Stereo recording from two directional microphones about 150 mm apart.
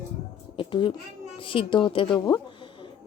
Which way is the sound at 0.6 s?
35° left (ahead or behind).